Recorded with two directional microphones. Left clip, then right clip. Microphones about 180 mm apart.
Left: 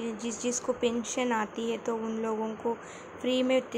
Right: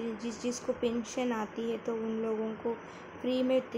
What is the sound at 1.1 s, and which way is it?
Speech, centre (ahead or behind).